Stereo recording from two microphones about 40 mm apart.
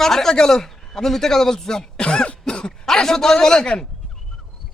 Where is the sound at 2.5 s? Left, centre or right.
Left.